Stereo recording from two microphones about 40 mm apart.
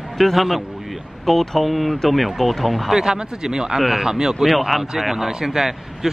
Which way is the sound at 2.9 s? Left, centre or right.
Centre.